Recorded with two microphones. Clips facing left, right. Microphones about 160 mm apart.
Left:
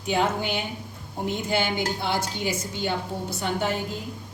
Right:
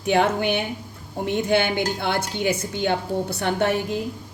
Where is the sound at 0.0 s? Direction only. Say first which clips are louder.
Right 5 dB; 65° right (ahead or behind).